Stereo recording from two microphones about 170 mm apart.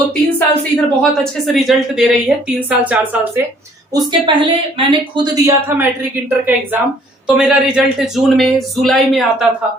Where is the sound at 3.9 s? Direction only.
25° right (ahead or behind); by 9.5 s centre (ahead or behind).